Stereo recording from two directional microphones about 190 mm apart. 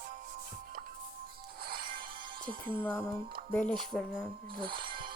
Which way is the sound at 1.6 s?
50° right (ahead or behind).